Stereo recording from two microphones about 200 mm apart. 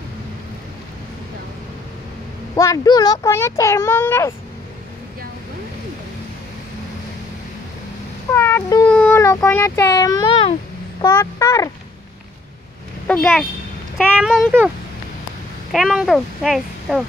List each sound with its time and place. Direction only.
2.5 s speech: 15° left (ahead or behind)
8.3 s cat: 10° left (ahead or behind)
8.9 s speech: 10° left (ahead or behind)
13.0 s speech: 5° left (ahead or behind)
15.7 s speech: centre (ahead or behind)